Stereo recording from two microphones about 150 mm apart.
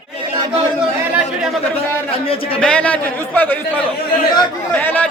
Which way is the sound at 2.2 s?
40° left (ahead or behind).